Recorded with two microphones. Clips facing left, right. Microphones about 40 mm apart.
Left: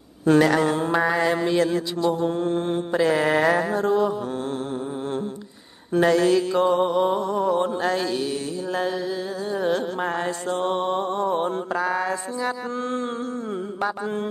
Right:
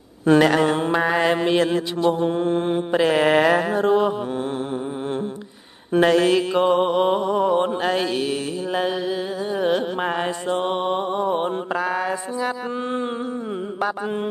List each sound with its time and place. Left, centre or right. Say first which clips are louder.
0.2 s mantra: right 2 dB; right
5.9 s mantra: right 2 dB; right
11.8 s mantra: right 1 dB; centre